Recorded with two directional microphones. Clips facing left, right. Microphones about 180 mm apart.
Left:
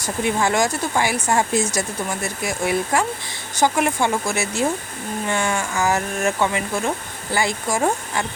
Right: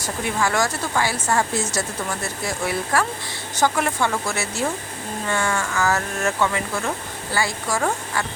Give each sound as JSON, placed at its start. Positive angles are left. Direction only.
{"t": 0.0, "sound": "speech", "side_deg": 20}